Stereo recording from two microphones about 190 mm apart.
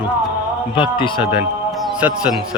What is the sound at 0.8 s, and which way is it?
Speech, 25° left (ahead or behind).